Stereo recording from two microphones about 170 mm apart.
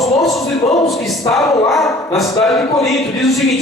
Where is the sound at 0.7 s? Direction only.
Centre (ahead or behind).